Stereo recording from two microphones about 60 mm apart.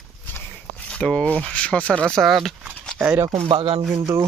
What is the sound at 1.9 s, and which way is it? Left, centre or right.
Speech, centre.